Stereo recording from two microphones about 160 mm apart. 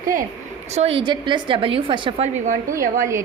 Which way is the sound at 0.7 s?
40° right (ahead or behind).